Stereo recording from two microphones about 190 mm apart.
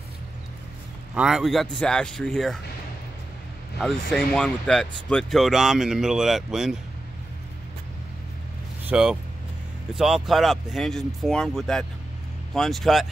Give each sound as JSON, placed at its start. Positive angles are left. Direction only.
{"t": 1.1, "sound": "speech", "side_deg": -5}
{"t": 3.8, "sound": "speech", "side_deg": 5}
{"t": 8.8, "sound": "speech", "side_deg": -5}